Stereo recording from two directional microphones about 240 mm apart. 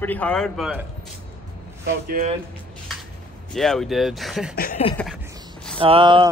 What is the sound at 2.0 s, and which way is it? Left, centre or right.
Speech, right.